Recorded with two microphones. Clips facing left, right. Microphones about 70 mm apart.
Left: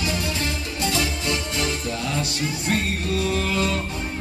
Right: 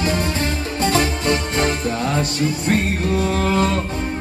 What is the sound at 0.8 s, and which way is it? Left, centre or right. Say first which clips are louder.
Music: right 7 dB; right.